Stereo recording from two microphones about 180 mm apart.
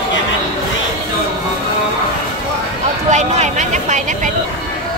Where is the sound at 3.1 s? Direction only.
40° right (ahead or behind).